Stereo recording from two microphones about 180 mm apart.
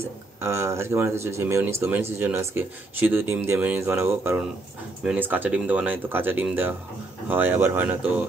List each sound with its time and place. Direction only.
0.4 s speech: 15° right (ahead or behind)